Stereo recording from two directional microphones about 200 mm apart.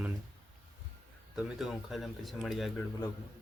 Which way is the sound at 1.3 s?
Centre (ahead or behind).